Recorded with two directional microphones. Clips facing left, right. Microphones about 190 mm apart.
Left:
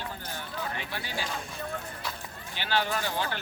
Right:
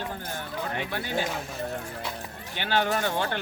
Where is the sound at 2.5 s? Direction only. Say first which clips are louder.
Right 4 dB; 50° right (ahead or behind).